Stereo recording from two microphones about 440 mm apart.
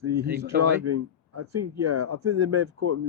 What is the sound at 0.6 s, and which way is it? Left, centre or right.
Speech, right.